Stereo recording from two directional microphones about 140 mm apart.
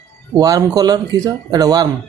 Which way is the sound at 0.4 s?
25° right (ahead or behind).